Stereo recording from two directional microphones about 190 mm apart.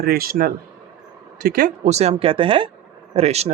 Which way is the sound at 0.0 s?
50° right (ahead or behind).